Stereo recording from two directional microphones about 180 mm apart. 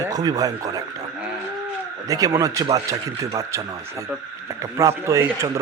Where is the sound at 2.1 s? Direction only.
20° right (ahead or behind).